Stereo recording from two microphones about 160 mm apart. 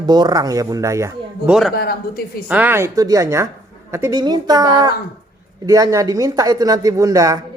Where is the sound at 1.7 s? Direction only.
75° left (ahead or behind).